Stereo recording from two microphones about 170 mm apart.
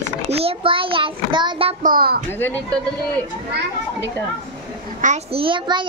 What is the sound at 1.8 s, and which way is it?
Speech, 60° right (ahead or behind).